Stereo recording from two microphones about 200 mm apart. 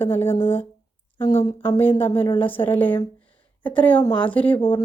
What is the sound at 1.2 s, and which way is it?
Speech, 30° left (ahead or behind).